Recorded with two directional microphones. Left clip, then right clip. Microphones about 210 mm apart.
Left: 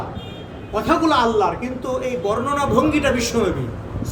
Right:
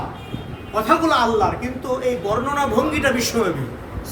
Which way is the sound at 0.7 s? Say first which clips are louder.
Right 1 dB; 10° right (ahead or behind).